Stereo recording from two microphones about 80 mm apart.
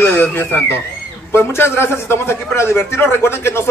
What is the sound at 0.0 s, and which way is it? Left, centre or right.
A man's voice, left.